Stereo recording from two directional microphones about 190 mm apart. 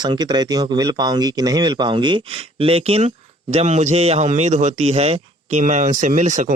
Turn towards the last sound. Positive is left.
turn(degrees=-40)  # may be behind; listen again after turning